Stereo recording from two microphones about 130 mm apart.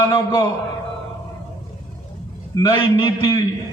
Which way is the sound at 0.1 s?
30° left (ahead or behind).